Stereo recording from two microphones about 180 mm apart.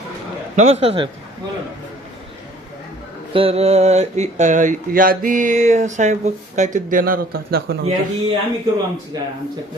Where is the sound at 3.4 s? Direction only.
35° right (ahead or behind); by 7.7 s 55° right (ahead or behind).